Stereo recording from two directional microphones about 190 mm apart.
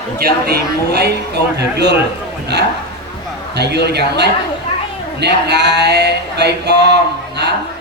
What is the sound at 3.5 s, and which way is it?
Speech, 60° right (ahead or behind).